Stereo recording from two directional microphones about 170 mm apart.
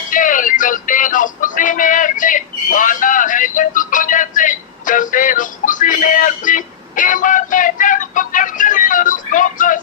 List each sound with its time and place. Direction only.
0.1 s music: 50° left (ahead or behind)